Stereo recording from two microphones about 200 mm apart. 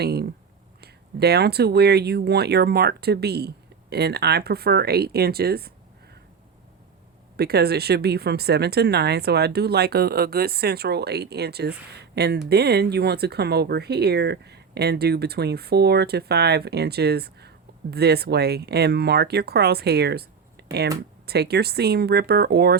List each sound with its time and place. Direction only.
0.0 s speech: 55° right (ahead or behind)
7.3 s speech: 50° right (ahead or behind)